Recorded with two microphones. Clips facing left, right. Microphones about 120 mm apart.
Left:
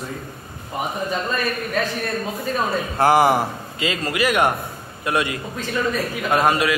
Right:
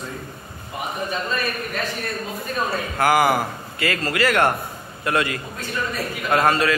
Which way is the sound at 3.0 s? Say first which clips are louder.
Left 2 dB; 30° left (ahead or behind).